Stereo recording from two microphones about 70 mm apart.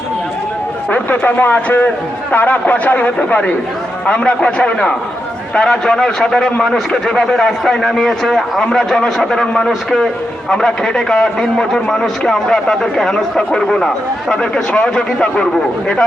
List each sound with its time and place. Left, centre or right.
0.9 s a man's voice: left